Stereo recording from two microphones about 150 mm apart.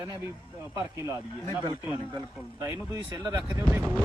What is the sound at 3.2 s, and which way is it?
Speech, 25° right (ahead or behind).